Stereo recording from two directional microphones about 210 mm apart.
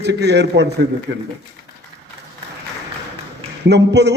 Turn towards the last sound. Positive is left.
turn(degrees=-55)  # may be behind; listen again after turning